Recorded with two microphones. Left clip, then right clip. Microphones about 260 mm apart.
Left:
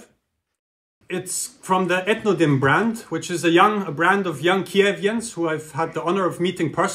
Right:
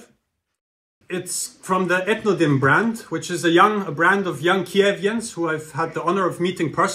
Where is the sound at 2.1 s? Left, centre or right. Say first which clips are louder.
Even; left.